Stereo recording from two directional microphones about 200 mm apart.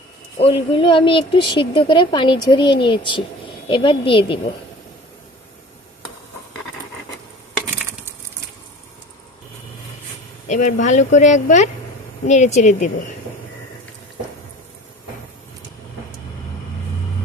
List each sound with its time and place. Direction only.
0.4 s speech: 30° left (ahead or behind)
10.5 s speech: 40° left (ahead or behind)